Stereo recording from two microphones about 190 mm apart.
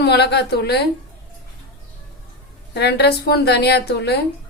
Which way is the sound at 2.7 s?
60° left (ahead or behind).